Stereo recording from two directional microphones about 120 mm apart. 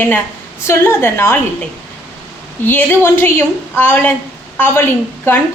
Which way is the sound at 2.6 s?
15° left (ahead or behind).